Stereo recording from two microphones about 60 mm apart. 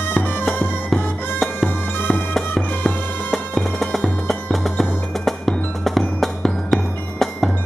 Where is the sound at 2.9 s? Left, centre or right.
Centre.